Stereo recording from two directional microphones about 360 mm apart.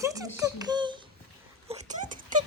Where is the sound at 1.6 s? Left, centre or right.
Centre.